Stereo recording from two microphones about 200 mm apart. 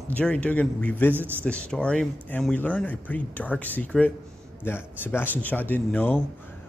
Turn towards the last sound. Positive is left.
turn(degrees=10)  # may be behind; listen again after turning